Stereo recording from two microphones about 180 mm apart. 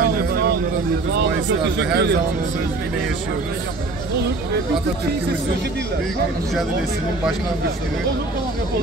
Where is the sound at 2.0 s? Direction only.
70° right (ahead or behind).